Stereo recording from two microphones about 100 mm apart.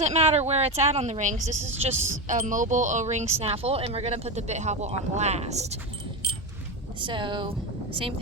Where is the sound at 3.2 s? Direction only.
90° right.